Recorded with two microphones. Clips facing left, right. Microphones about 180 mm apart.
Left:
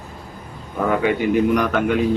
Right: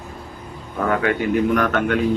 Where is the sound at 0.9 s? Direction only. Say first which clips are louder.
Left 1 dB; 10° left (ahead or behind).